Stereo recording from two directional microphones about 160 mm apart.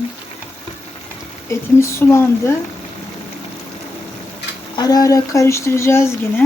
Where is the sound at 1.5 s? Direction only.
15° left (ahead or behind).